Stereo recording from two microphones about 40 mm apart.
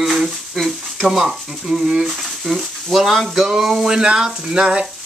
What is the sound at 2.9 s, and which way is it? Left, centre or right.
Speech, centre.